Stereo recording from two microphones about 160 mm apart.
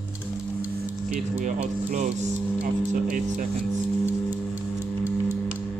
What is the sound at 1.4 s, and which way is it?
Speech, 55° right (ahead or behind).